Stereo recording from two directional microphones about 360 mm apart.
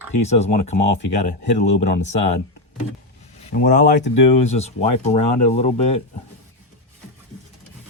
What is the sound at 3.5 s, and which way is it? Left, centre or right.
Speech, left.